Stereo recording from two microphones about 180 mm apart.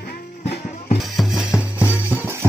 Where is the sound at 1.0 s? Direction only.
Centre (ahead or behind).